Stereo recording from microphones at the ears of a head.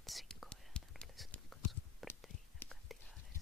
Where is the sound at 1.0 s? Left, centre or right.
Centre.